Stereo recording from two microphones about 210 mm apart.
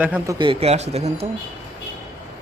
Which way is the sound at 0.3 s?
25° right (ahead or behind).